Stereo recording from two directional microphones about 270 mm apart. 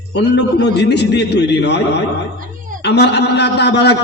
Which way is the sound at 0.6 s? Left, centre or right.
Left.